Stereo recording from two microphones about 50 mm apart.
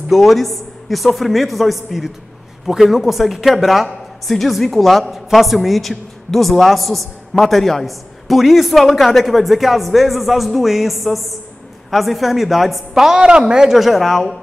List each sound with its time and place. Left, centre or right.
0.1 s speech: centre